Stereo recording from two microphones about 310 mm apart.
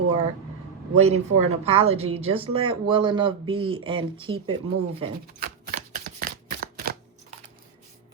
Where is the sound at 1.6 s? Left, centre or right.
Centre.